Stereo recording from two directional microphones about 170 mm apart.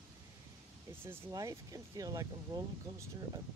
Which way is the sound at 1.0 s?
15° right (ahead or behind).